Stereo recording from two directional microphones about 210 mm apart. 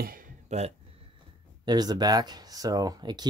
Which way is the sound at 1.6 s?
20° right (ahead or behind).